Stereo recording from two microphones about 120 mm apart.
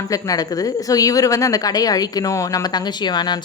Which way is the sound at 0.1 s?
30° left (ahead or behind).